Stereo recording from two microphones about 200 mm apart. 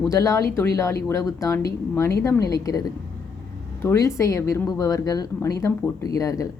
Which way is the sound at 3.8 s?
15° left (ahead or behind).